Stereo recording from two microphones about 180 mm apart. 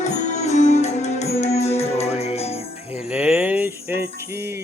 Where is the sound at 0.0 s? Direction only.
40° left (ahead or behind).